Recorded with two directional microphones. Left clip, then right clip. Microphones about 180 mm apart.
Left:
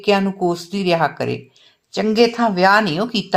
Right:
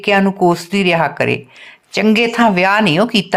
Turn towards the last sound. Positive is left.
turn(degrees=-20)  # may be behind; listen again after turning